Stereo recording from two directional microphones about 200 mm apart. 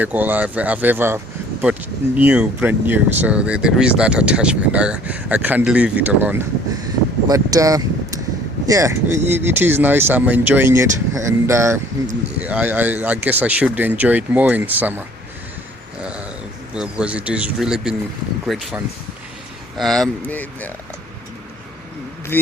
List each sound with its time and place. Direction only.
0.0 s speech: 10° right (ahead or behind)
16.0 s a sound: 5° right (ahead or behind)
16.7 s a man's voice: 5° right (ahead or behind)
22.3 s speech: 10° left (ahead or behind)